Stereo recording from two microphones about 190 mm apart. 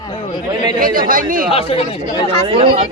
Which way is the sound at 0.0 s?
25° left (ahead or behind).